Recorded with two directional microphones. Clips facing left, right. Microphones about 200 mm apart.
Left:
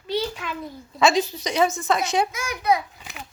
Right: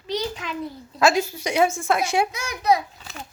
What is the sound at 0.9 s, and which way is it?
A woman's voice, 5° right (ahead or behind).